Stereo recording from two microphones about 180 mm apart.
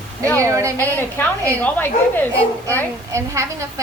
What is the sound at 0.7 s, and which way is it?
A woman's voice, 10° left (ahead or behind).